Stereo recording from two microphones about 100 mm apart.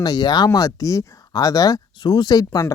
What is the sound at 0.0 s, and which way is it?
Speech, 40° left (ahead or behind).